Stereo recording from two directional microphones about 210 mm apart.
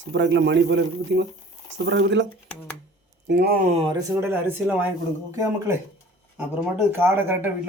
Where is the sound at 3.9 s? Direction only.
10° right (ahead or behind).